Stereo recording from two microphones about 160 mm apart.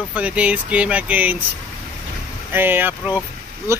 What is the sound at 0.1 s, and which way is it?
Speech, 10° right (ahead or behind).